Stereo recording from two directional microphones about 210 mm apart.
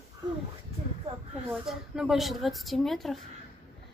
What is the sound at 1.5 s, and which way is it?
Speech, 5° right (ahead or behind).